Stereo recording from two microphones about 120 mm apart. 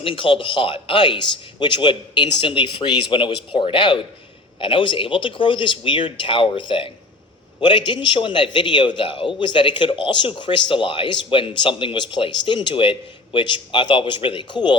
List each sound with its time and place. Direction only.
0.0 s a man's voice: 45° left (ahead or behind)